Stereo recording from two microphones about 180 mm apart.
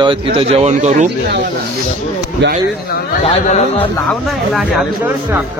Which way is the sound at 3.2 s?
40° left (ahead or behind).